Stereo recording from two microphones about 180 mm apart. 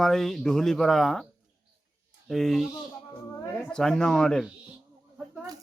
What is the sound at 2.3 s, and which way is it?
Speech, centre (ahead or behind).